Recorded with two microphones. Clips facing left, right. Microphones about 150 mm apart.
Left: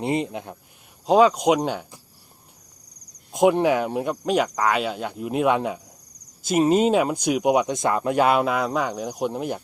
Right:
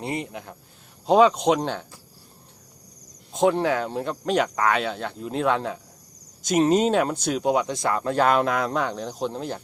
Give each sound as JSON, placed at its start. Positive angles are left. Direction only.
{"t": 0.0, "sound": "speech", "side_deg": 20}
{"t": 1.0, "sound": "speech", "side_deg": 5}
{"t": 3.3, "sound": "speech", "side_deg": 15}